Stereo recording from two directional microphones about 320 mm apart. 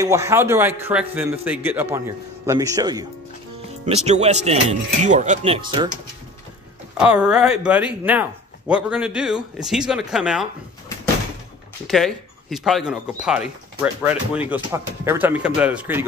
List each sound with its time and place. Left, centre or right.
0.0 s a man's voice: centre
7.0 s speech: centre
11.9 s speech: centre